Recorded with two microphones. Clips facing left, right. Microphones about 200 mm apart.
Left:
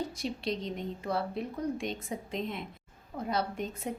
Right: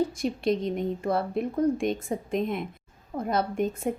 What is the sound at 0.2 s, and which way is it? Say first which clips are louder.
A woman's voice: right 8 dB; 50° right (ahead or behind).